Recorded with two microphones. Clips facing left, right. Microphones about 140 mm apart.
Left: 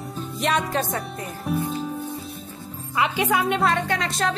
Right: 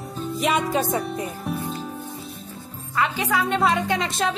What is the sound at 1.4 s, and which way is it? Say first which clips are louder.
Music: left 3 dB; centre (ahead or behind).